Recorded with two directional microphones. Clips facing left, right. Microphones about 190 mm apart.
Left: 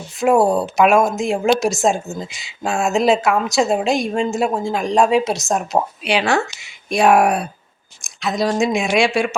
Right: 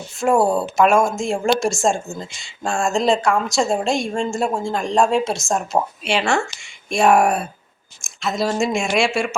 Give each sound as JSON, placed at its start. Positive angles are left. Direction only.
{"t": 0.5, "sound": "a woman's voice", "side_deg": 0}